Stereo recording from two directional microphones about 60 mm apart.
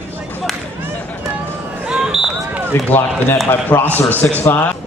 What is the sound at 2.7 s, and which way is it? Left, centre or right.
A man's voice, left.